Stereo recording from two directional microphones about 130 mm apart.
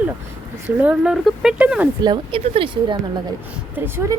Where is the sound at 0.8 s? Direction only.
10° right (ahead or behind).